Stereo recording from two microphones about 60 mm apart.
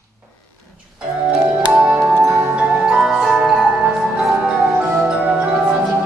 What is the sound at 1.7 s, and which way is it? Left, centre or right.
Music, centre.